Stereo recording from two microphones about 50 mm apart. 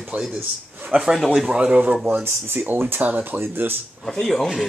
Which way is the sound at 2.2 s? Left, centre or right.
Right.